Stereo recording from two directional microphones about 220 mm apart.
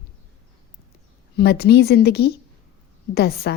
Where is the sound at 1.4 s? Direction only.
45° left (ahead or behind).